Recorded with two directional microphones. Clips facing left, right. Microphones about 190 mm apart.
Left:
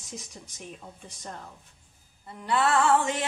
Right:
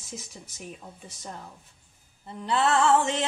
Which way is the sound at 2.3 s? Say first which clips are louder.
Right 1 dB; 25° right (ahead or behind).